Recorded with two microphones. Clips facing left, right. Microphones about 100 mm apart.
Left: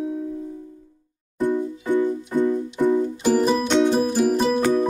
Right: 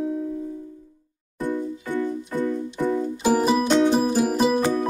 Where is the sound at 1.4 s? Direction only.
20° left (ahead or behind).